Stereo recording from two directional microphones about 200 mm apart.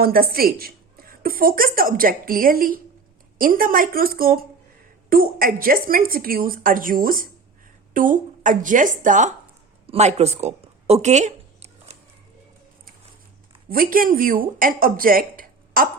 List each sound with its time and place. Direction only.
0.0 s a woman's voice: 45° right (ahead or behind)
9.8 s a sound: 30° right (ahead or behind)
13.7 s a woman's voice: 45° right (ahead or behind)